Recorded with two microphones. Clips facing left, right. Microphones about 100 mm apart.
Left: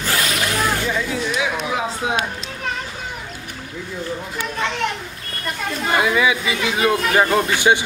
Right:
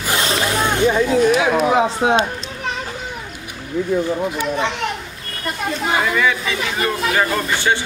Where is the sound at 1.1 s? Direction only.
45° right (ahead or behind).